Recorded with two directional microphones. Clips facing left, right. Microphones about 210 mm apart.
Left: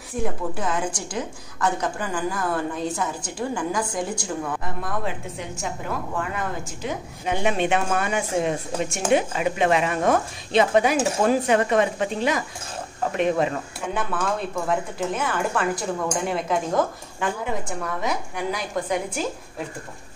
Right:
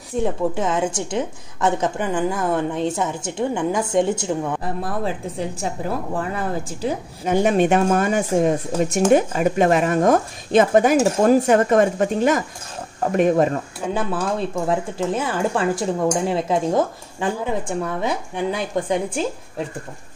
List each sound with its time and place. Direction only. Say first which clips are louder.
0.2 s a woman's voice: right 5 dB; 25° right (ahead or behind); by 13.6 s 45° right (ahead or behind)
13.8 s a woman's voice: right 3 dB; 30° right (ahead or behind)